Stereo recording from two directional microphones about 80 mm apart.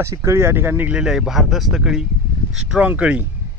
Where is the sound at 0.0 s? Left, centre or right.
Right.